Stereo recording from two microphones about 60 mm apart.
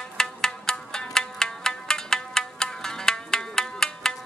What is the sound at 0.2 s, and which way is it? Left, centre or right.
Music, centre.